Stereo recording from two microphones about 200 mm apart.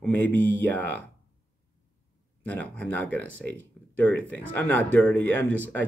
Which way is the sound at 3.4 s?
60° right (ahead or behind).